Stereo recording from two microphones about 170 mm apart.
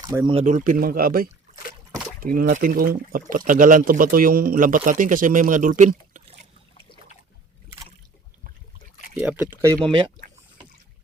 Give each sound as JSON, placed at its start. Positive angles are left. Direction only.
{"t": 0.0, "sound": "speech", "side_deg": -20}
{"t": 0.4, "sound": "speech", "side_deg": -50}
{"t": 9.2, "sound": "speech", "side_deg": -10}